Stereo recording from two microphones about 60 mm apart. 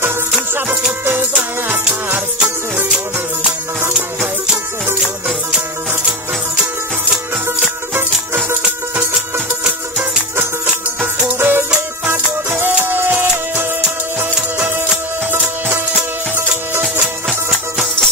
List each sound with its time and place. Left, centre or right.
0.3 s music: centre
2.1 s music: centre
11.3 s music: right
17.3 s music: centre